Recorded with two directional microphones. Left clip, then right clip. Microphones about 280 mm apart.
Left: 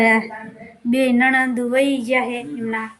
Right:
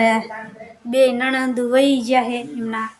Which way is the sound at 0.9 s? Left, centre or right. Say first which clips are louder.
Right 1 dB; centre.